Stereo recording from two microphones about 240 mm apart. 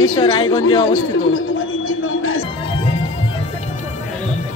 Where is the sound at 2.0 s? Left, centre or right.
Left.